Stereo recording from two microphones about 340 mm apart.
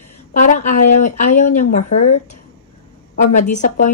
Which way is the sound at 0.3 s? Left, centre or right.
Left.